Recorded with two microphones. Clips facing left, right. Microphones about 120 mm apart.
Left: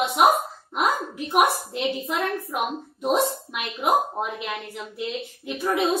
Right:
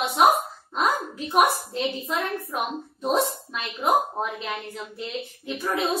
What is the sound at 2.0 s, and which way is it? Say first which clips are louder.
Speech: left 2 dB; centre (ahead or behind).